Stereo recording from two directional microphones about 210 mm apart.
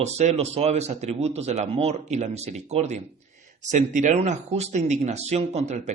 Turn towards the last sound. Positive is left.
turn(degrees=-35)  # may be behind; listen again after turning